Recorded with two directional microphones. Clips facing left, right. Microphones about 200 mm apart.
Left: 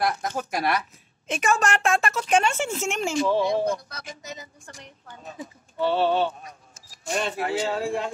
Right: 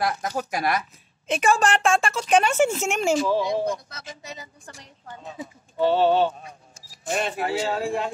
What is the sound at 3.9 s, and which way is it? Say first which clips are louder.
Speech: left 1 dB; 25° right (ahead or behind).